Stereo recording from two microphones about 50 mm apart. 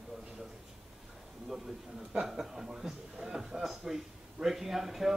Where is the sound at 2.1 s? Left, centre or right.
Centre.